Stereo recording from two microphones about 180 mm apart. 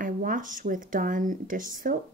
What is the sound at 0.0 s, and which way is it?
Speech, 50° right (ahead or behind).